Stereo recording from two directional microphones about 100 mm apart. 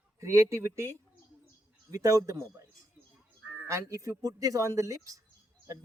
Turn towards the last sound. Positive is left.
turn(degrees=-35)  # may be behind; listen again after turning